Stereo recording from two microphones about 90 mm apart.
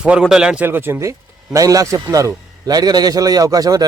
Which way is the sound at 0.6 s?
25° right (ahead or behind).